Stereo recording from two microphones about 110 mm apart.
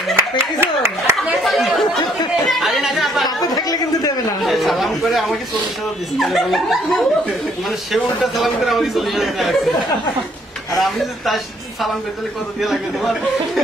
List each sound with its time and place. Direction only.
0.1 s speech: 20° right (ahead or behind)
1.3 s speech: centre (ahead or behind)
2.4 s chatter: centre (ahead or behind)
3.5 s a sound: 35° left (ahead or behind)
4.5 s chatter: centre (ahead or behind)
6.1 s speech: centre (ahead or behind)
10.8 s speech: centre (ahead or behind)